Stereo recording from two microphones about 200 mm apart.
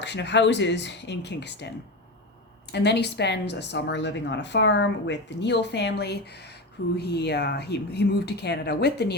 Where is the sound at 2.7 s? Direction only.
55° left (ahead or behind).